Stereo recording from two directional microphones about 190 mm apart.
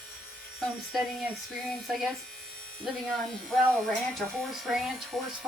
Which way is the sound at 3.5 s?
Centre (ahead or behind).